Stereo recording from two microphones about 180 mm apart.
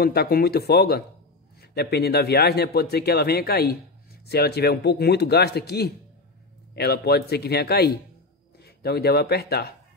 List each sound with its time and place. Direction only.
0.0 s speech: 60° left (ahead or behind)